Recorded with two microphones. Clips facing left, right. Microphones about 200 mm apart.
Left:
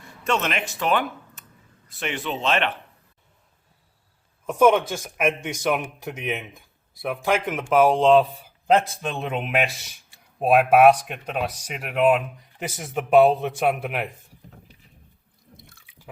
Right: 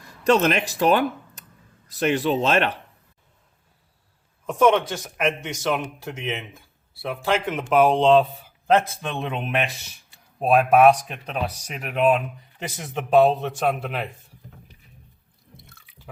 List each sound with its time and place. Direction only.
0.3 s speech: 35° right (ahead or behind)
4.4 s a man's voice: 5° left (ahead or behind)